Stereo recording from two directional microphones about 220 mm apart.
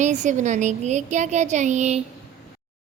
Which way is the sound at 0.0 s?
35° right (ahead or behind).